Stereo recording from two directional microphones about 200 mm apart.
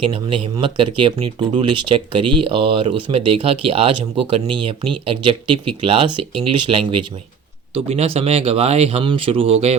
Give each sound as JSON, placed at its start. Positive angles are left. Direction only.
{"t": 0.0, "sound": "speech", "side_deg": -25}